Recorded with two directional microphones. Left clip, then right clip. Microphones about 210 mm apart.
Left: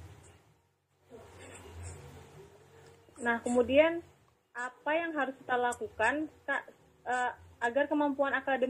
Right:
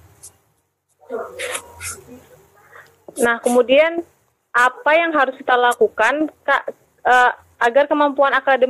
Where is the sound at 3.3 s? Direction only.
55° right (ahead or behind).